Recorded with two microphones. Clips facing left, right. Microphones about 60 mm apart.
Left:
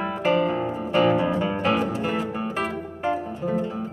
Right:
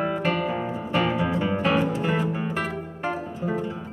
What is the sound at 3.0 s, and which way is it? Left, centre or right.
Music, centre.